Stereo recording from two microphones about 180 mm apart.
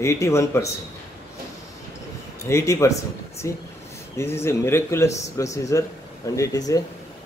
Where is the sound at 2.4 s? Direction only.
15° left (ahead or behind).